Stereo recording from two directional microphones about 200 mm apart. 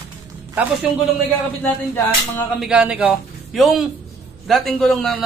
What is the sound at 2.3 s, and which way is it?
Speech, centre (ahead or behind).